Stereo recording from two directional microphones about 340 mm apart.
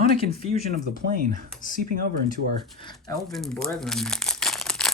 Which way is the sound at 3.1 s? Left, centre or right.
Centre.